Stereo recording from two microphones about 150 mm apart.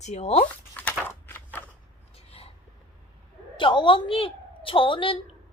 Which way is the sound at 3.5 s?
35° left (ahead or behind).